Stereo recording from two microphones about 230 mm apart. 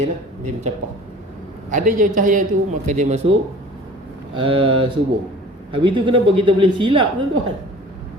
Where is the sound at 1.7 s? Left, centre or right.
Right.